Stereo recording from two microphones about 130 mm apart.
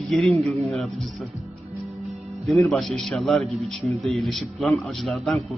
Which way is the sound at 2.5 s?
Centre (ahead or behind).